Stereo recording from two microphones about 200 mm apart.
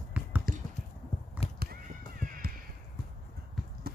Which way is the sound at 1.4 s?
30° left (ahead or behind).